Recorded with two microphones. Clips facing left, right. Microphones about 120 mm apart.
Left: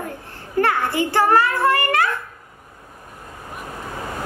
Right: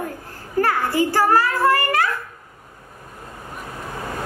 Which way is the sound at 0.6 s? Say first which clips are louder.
Left 1 dB; 35° right (ahead or behind).